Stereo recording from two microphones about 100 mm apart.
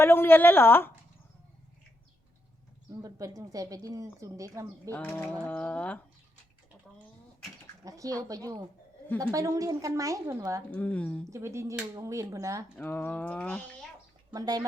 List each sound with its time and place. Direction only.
0.0 s a woman's voice: 20° left (ahead or behind)
2.9 s a woman's voice: 35° right (ahead or behind)
4.9 s speech: 20° left (ahead or behind)
7.9 s a woman's voice: 35° right (ahead or behind)
10.7 s speech: 15° left (ahead or behind)
11.3 s a woman's voice: 30° right (ahead or behind)
12.7 s speech: 20° left (ahead or behind)
14.3 s a woman's voice: 40° right (ahead or behind)